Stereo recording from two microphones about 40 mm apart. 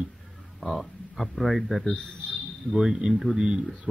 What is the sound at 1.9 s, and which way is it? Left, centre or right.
Speech, left.